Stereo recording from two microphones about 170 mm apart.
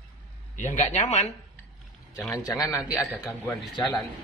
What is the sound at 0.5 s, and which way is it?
Speech, 45° left (ahead or behind).